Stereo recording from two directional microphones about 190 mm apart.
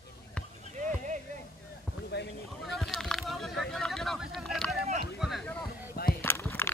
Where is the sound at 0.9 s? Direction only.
40° right (ahead or behind).